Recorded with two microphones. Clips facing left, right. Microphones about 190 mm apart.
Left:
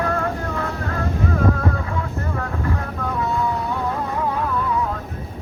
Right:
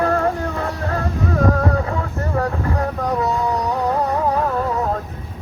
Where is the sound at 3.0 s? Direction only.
40° right (ahead or behind).